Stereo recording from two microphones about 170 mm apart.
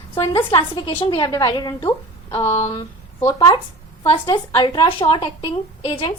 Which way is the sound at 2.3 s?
35° left (ahead or behind).